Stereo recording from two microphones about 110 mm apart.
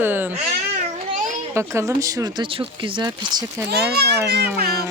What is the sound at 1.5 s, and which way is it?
Speech, 25° right (ahead or behind).